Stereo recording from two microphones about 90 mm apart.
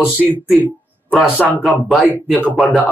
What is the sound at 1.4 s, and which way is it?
Speech, 20° left (ahead or behind).